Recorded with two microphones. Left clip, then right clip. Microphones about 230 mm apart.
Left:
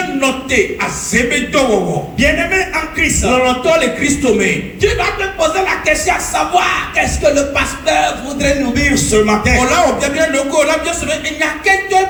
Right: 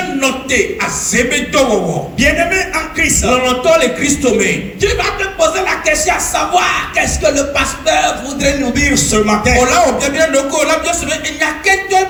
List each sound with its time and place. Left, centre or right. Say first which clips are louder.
0.2 s a man's voice: even; right